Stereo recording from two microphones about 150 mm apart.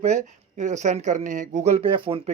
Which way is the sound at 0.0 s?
50° right (ahead or behind).